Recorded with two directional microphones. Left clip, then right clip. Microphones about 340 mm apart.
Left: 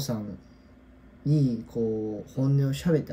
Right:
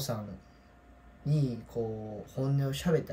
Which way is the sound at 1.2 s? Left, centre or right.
Centre.